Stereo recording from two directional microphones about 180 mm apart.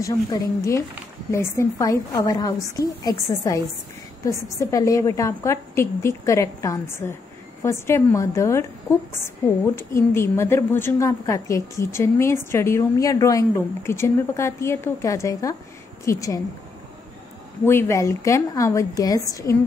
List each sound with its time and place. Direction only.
0.0 s a woman's voice: 15° left (ahead or behind)
17.6 s a woman's voice: 15° left (ahead or behind)